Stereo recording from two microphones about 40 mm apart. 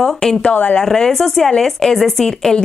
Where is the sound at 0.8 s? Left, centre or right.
Centre.